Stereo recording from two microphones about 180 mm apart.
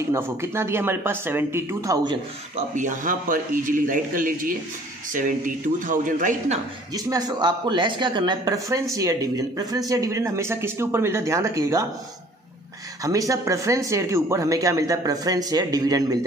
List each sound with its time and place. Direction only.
0.1 s a man's voice: 15° right (ahead or behind)
2.5 s a man's voice: 45° right (ahead or behind)
6.9 s a man's voice: 20° right (ahead or behind)
13.0 s speech: 20° right (ahead or behind)